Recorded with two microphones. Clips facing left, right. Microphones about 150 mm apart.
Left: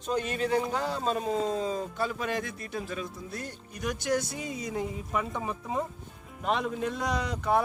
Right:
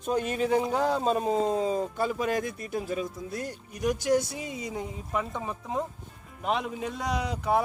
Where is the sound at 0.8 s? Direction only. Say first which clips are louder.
Right 4 dB; 45° right (ahead or behind).